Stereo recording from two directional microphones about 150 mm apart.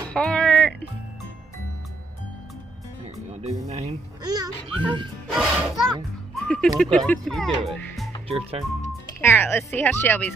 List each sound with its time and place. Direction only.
0.1 s music: 5° left (ahead or behind)
3.3 s speech: 45° right (ahead or behind)
4.2 s a child's voice: 25° right (ahead or behind)
5.3 s music: 5° right (ahead or behind)
6.3 s speech: 5° left (ahead or behind)
8.3 s speech: 40° right (ahead or behind)
9.2 s speech: 15° left (ahead or behind)